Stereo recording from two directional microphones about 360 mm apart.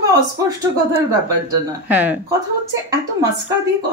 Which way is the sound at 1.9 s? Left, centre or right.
Centre.